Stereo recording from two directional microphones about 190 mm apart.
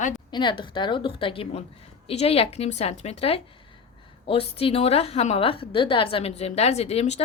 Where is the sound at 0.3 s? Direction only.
25° left (ahead or behind).